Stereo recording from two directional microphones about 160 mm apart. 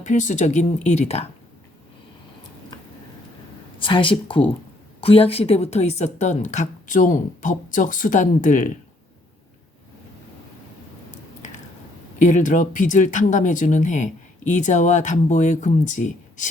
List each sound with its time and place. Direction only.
0.0 s speech: 50° left (ahead or behind)
3.8 s speech: 30° left (ahead or behind); by 8.7 s 55° left (ahead or behind)
12.3 s speech: 50° left (ahead or behind)